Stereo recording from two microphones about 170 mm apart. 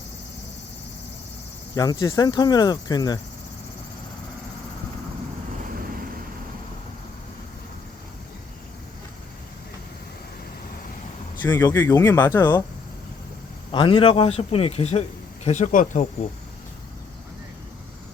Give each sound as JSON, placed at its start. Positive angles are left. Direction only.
{"t": 1.7, "sound": "speech", "side_deg": 25}
{"t": 11.4, "sound": "speech", "side_deg": 10}
{"t": 13.7, "sound": "a man's voice", "side_deg": 30}